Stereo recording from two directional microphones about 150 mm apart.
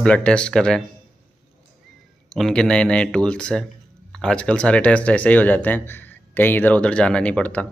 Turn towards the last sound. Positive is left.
turn(degrees=10)  # may be behind; listen again after turning